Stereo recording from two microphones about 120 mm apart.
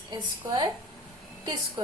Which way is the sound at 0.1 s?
40° right (ahead or behind).